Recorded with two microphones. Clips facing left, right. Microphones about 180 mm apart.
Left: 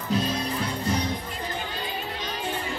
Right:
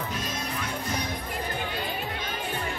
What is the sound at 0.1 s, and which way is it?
Music, 35° left (ahead or behind).